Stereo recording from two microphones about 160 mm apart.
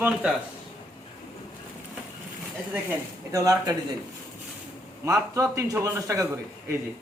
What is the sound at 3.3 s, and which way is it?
Speech, 20° right (ahead or behind).